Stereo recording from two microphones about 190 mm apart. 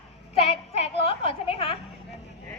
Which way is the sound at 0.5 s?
30° left (ahead or behind).